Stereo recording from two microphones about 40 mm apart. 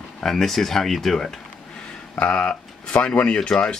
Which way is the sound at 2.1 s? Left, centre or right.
Left.